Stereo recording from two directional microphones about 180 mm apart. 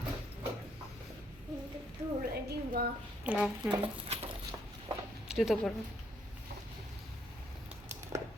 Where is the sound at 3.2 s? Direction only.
5° right (ahead or behind).